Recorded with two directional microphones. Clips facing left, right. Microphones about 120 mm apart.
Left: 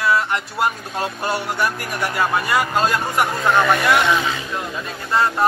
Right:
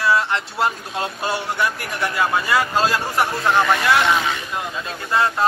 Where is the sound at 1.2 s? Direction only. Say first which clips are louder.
Left 1 dB; 25° right (ahead or behind).